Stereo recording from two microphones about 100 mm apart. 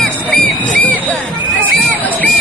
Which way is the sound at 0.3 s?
15° left (ahead or behind).